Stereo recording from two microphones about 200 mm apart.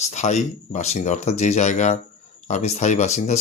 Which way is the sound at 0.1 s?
35° left (ahead or behind).